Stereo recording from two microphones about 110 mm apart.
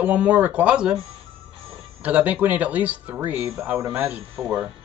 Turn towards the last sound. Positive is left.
turn(degrees=-5)  # may be behind; listen again after turning